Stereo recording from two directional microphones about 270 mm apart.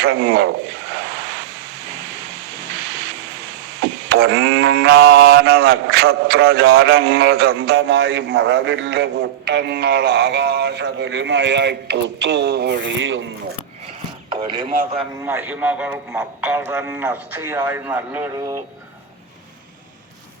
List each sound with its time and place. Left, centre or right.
0.0 s a man's voice: right
4.1 s a man's voice: right
14.3 s speech: centre
14.7 s a man's voice: right
15.2 s a man's voice: centre